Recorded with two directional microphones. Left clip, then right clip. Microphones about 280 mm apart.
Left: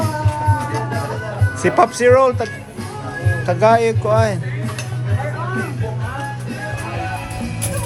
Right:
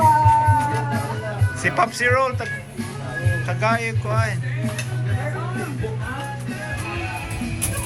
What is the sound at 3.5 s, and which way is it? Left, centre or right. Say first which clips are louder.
Speech: left 10 dB; centre.